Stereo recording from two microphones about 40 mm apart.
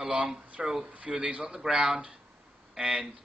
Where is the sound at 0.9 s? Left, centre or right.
Right.